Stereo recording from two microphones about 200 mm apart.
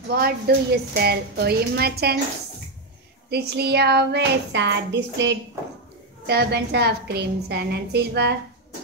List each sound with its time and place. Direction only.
0.1 s a woman's voice: 50° right (ahead or behind)
3.3 s a woman's voice: 55° right (ahead or behind)